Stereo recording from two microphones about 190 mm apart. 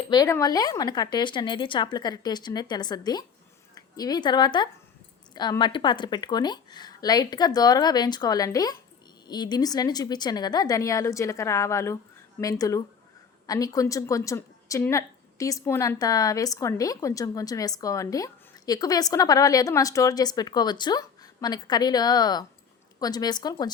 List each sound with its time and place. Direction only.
0.1 s a woman's voice: 20° left (ahead or behind)